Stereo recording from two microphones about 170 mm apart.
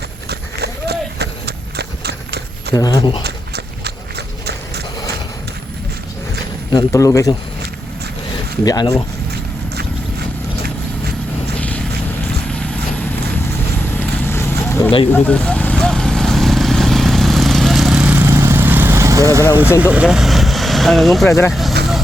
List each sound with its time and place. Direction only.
0.3 s horse: 75° right (ahead or behind)
2.7 s speech: 20° left (ahead or behind)
3.2 s a sound: 70° right (ahead or behind)
6.7 s speech: 20° left (ahead or behind)
8.6 s speech: 20° left (ahead or behind)
11.5 s vehicle: 10° left (ahead or behind)
14.3 s vehicle: 15° left (ahead or behind); by 19.5 s 20° right (ahead or behind)
19.8 s speech: 5° right (ahead or behind)
21.2 s speech: 15° left (ahead or behind)
21.5 s vehicle: centre (ahead or behind)